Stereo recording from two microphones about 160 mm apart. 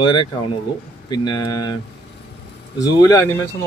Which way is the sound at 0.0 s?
30° left (ahead or behind).